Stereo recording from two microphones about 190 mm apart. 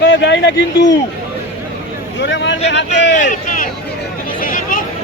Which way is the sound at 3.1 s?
45° left (ahead or behind).